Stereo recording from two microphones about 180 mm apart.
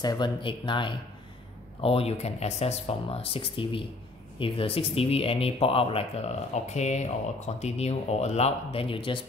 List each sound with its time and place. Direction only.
0.0 s speech: 25° left (ahead or behind)